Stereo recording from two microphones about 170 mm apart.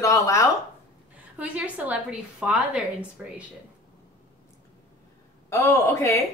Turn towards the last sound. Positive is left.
turn(degrees=15)  # may be behind; listen again after turning